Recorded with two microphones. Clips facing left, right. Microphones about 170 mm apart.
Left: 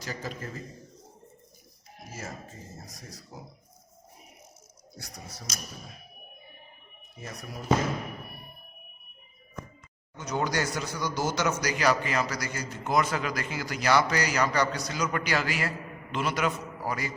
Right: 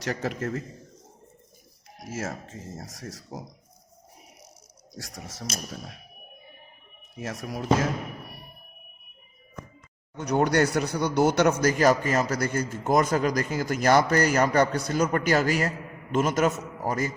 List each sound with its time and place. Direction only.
0.0 s a man's voice: 75° right (ahead or behind)
2.0 s speech: 90° right
4.9 s speech: 90° right
7.2 s speech: 85° right
10.2 s speech: 60° right (ahead or behind); by 17.2 s 45° right (ahead or behind)